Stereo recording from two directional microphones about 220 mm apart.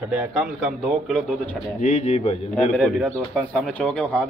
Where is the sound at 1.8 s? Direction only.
30° left (ahead or behind).